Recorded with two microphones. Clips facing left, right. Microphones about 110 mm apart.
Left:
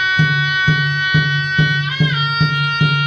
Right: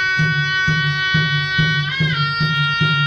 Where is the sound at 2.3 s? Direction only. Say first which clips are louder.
Left 2 dB; 35° left (ahead or behind).